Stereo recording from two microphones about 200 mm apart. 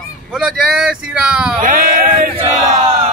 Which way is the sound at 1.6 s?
45° right (ahead or behind).